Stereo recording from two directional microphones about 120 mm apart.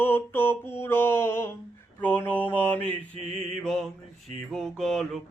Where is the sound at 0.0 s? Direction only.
15° left (ahead or behind).